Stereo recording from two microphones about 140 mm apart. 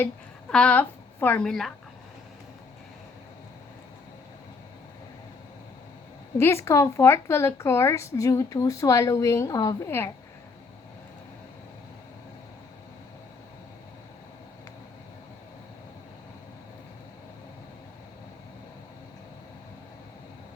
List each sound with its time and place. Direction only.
0.5 s a woman's voice: 10° left (ahead or behind)
6.3 s speech: 20° left (ahead or behind)